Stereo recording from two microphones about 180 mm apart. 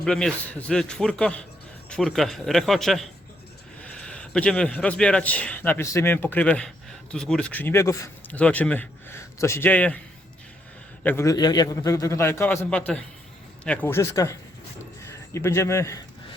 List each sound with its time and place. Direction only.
0.0 s a man's voice: 5° left (ahead or behind)
11.0 s a man's voice: 15° left (ahead or behind)